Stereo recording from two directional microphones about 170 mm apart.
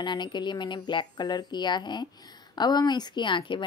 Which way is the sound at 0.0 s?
25° left (ahead or behind).